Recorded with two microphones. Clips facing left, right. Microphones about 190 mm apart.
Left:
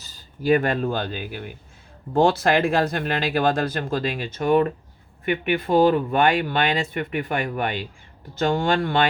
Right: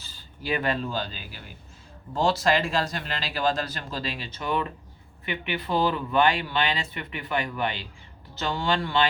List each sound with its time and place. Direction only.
0.0 s speech: 45° left (ahead or behind)